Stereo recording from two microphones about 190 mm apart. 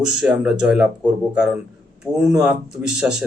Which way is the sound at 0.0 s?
5° right (ahead or behind).